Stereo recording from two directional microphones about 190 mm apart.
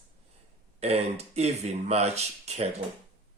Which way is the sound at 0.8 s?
35° right (ahead or behind).